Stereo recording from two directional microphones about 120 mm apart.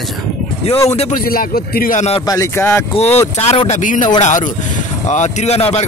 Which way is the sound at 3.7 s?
90° left.